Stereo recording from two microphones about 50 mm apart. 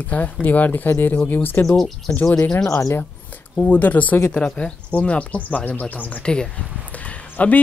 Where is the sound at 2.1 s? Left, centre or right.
Left.